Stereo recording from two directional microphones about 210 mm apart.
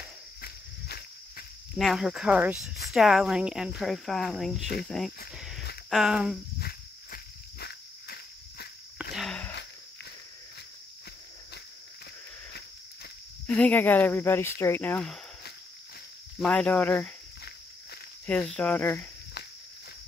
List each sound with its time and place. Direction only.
0.4 s cricket: 45° left (ahead or behind)
1.8 s speech: centre (ahead or behind)
5.3 s a sound: centre (ahead or behind)
5.9 s speech: centre (ahead or behind)
6.6 s a sound: 50° left (ahead or behind)
9.1 s a sound: centre (ahead or behind)
13.5 s speech: 5° left (ahead or behind)
16.3 s speech: 5° left (ahead or behind)
18.2 s speech: 5° left (ahead or behind)